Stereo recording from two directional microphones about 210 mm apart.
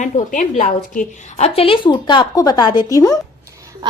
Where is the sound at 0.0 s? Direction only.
35° left (ahead or behind); by 3.2 s 15° left (ahead or behind).